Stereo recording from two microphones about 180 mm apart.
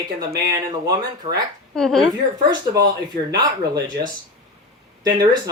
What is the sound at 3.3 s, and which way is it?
Speech, 20° right (ahead or behind).